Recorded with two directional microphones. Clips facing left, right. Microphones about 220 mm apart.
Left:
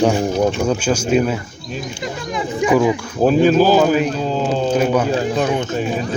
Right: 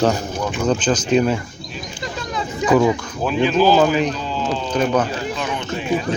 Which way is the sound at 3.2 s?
45° left (ahead or behind).